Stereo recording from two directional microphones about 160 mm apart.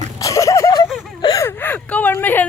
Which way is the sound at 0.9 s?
Centre (ahead or behind).